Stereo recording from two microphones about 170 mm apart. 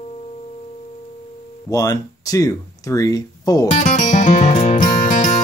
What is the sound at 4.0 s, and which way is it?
Music, 45° left (ahead or behind).